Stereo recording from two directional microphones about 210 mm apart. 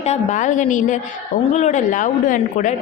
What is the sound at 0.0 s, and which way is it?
A woman's voice, 30° left (ahead or behind).